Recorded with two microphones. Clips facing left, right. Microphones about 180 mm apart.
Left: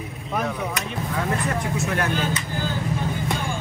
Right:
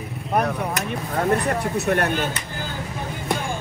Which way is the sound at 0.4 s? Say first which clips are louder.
Right 3 dB; 55° right (ahead or behind).